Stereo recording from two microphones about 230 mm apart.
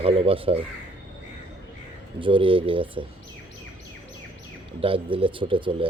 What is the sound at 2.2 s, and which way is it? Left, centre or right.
Speech, right.